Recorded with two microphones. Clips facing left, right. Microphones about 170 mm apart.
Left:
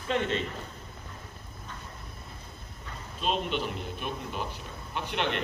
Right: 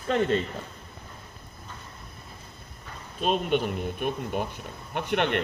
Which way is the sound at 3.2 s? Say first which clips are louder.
Right 5 dB; 50° right (ahead or behind).